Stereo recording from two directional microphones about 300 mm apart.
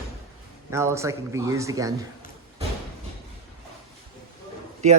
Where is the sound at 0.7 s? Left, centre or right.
Centre.